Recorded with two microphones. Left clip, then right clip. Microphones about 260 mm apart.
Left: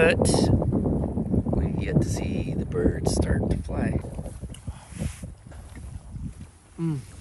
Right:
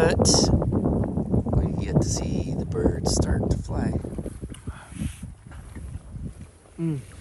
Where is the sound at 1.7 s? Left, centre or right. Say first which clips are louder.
Right 1 dB; centre.